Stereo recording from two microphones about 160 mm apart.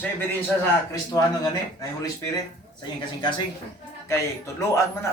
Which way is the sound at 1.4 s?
25° left (ahead or behind).